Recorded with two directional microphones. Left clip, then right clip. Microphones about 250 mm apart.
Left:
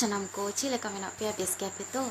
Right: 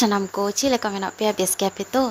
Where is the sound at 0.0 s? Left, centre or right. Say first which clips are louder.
Right 10 dB; right.